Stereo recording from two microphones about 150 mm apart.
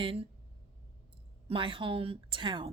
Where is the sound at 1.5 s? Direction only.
35° right (ahead or behind).